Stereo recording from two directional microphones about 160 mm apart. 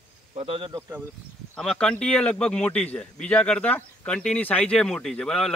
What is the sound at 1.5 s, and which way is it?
A man's voice, 5° left (ahead or behind).